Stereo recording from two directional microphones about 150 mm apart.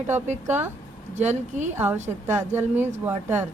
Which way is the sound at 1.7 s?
15° right (ahead or behind).